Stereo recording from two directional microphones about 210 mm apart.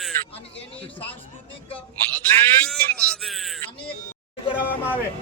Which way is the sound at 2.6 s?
5° left (ahead or behind).